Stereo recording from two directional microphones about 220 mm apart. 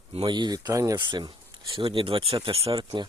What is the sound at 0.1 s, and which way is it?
Speech, 20° right (ahead or behind).